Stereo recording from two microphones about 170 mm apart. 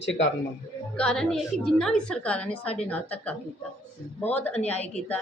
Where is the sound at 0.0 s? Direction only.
90° left.